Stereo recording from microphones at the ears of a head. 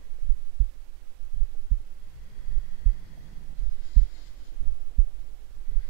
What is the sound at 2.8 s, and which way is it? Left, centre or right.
Heart sounds, right.